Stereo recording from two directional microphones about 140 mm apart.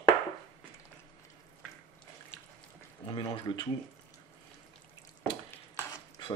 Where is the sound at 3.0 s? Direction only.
35° left (ahead or behind).